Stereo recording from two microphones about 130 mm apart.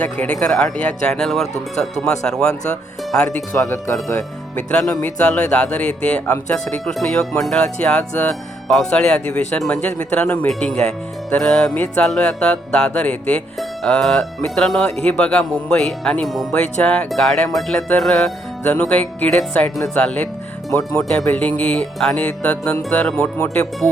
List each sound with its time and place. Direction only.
0.0 s speech: 10° left (ahead or behind)
3.3 s speech: 20° left (ahead or behind)
4.7 s speech: 5° left (ahead or behind)